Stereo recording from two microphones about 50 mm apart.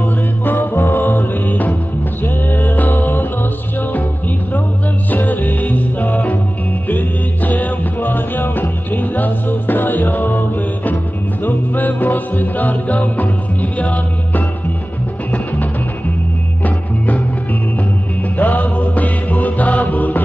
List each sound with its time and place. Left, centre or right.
0.5 s music: left
5.1 s music: left
16.6 s music: left
18.4 s music: left